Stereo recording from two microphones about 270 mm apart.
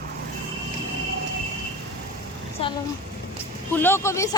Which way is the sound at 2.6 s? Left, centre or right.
Left.